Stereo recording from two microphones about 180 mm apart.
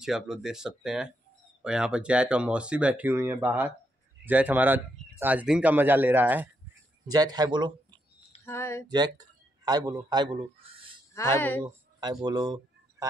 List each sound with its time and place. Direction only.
0.0 s speech: 5° right (ahead or behind)
7.1 s speech: 20° right (ahead or behind)
8.5 s speech: 15° left (ahead or behind)
8.8 s a man's voice: 25° right (ahead or behind)
11.1 s speech: 15° left (ahead or behind)
11.6 s a sound: 20° right (ahead or behind)
12.3 s speech: 25° right (ahead or behind)